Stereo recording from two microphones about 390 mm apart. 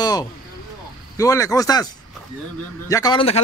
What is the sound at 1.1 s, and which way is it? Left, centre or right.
Speech, centre.